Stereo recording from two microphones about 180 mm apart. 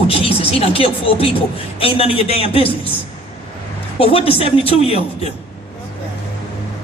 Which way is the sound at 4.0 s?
30° left (ahead or behind).